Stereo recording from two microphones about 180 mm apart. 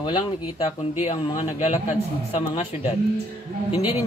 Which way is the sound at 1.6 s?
35° left (ahead or behind).